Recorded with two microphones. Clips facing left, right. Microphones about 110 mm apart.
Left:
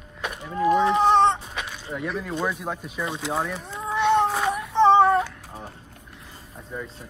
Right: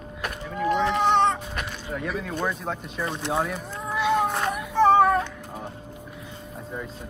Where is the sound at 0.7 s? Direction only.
30° left (ahead or behind).